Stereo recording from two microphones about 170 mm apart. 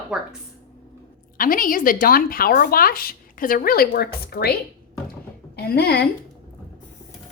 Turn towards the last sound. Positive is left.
turn(degrees=70)  # may be behind; listen again after turning